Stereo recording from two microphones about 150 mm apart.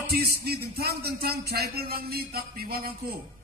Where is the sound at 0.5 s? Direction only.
90° right.